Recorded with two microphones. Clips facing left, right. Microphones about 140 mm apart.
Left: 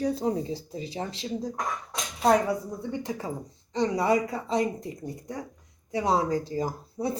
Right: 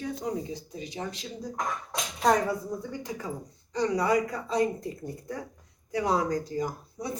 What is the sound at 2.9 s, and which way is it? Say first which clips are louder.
Speech: left 3 dB; 25° left (ahead or behind).